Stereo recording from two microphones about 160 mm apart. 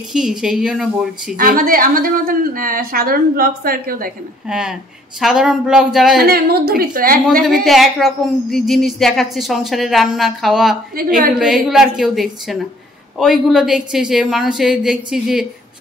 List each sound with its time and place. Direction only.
0.1 s a woman's voice: 5° right (ahead or behind)
1.3 s a woman's voice: 65° right (ahead or behind)
4.5 s a woman's voice: 5° right (ahead or behind)
6.2 s a woman's voice: 70° right (ahead or behind)
7.4 s a woman's voice: centre (ahead or behind)
11.0 s a woman's voice: 60° right (ahead or behind)
11.3 s a woman's voice: centre (ahead or behind)